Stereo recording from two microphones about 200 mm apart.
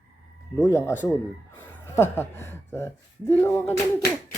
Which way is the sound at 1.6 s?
10° left (ahead or behind).